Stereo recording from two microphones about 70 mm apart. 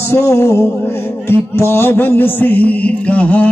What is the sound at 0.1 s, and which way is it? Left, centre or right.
Music, left.